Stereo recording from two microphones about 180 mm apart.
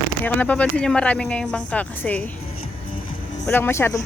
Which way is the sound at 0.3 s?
10° left (ahead or behind).